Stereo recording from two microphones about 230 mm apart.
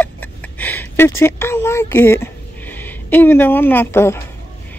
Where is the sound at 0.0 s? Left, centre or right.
Centre.